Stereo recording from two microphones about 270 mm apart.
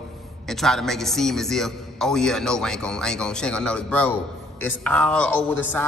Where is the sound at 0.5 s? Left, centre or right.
Centre.